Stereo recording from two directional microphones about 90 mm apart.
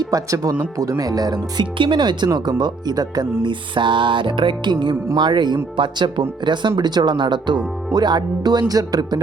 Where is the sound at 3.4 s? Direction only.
65° right (ahead or behind).